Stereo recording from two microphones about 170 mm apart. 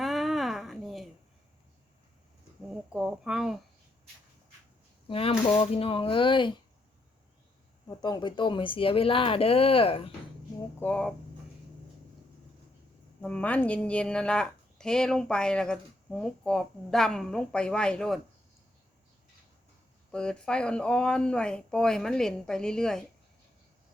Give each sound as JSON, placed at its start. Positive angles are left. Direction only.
{"t": 0.0, "sound": "a sound", "side_deg": 0}
{"t": 2.6, "sound": "speech", "side_deg": -5}
{"t": 5.0, "sound": "speech", "side_deg": 35}
{"t": 7.9, "sound": "speech", "side_deg": 25}
{"t": 10.8, "sound": "speech", "side_deg": 5}
{"t": 13.2, "sound": "speech", "side_deg": 10}
{"t": 20.1, "sound": "speech", "side_deg": 5}